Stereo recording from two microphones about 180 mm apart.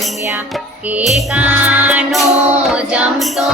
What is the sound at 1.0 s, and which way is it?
Music, 5° right (ahead or behind).